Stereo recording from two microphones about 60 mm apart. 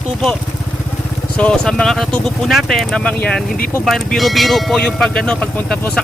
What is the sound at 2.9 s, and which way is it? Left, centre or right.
Speech, centre.